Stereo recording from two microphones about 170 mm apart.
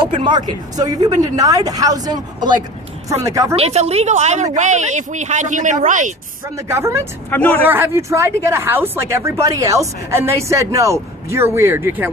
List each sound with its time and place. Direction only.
0.0 s speech: 25° right (ahead or behind)
3.5 s speech: 35° right (ahead or behind)
6.6 s speech: 15° right (ahead or behind)
7.3 s speech: 10° left (ahead or behind)
7.6 s speech: 10° right (ahead or behind)